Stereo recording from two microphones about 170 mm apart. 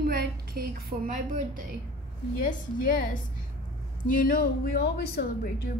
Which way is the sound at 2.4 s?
55° left (ahead or behind).